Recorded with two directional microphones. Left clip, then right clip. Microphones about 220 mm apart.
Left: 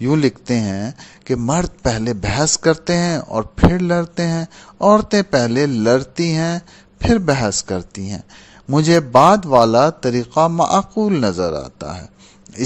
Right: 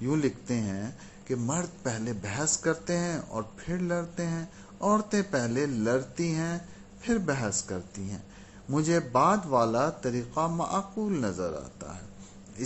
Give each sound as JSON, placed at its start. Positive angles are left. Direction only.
{"t": 0.0, "sound": "a man's voice", "side_deg": 50}